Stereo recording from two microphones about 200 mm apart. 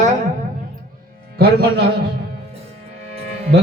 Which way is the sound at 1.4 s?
50° right (ahead or behind).